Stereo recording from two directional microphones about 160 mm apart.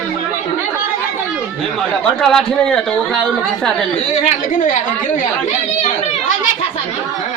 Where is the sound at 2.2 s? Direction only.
5° left (ahead or behind).